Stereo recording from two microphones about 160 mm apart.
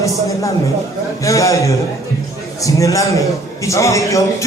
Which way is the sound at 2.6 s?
20° left (ahead or behind).